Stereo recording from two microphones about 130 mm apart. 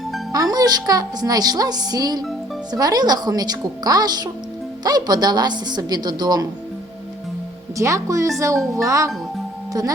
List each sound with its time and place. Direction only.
0.3 s a woman's voice: 30° right (ahead or behind)
7.8 s a woman's voice: 25° right (ahead or behind)